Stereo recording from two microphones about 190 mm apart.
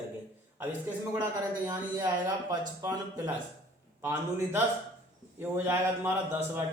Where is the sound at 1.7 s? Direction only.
20° right (ahead or behind).